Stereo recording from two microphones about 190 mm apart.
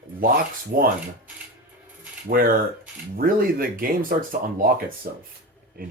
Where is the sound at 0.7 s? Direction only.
50° right (ahead or behind).